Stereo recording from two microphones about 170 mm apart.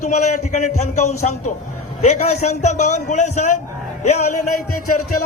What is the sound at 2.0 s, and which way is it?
A man's voice, 40° left (ahead or behind).